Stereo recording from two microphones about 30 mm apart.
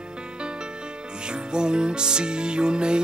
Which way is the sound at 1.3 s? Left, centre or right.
Right.